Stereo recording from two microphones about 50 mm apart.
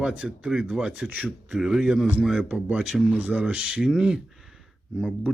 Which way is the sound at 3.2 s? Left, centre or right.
Right.